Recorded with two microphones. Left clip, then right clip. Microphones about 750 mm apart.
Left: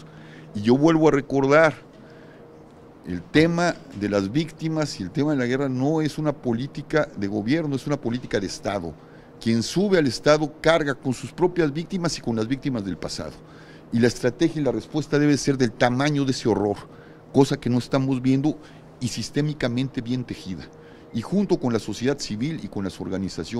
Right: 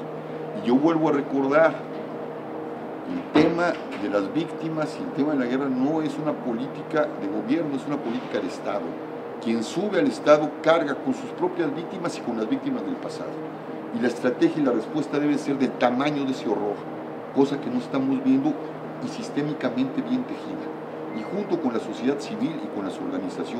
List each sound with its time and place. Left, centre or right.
0.6 s a man's voice: left
3.3 s speech: left
17.4 s speech: left